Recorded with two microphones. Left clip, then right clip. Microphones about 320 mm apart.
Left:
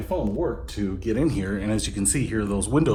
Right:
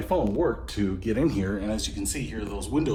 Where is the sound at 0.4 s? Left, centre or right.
Centre.